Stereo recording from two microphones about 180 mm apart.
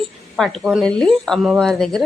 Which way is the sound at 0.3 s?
Centre (ahead or behind).